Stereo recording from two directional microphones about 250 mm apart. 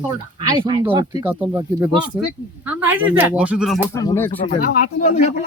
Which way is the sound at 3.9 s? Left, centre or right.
Centre.